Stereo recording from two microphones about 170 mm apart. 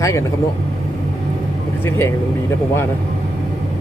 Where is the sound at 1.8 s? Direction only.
15° left (ahead or behind).